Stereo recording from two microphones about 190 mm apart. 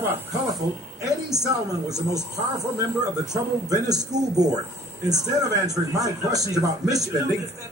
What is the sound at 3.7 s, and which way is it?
Speech, 20° right (ahead or behind).